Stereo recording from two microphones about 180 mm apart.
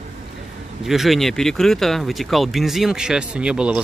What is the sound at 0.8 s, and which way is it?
Speech, centre (ahead or behind).